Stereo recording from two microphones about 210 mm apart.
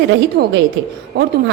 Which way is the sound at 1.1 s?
50° right (ahead or behind).